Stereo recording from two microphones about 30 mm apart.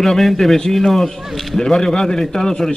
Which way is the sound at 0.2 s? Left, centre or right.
Centre.